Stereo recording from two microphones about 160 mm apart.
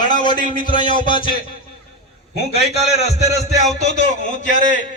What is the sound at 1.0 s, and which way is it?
Speech, 30° left (ahead or behind).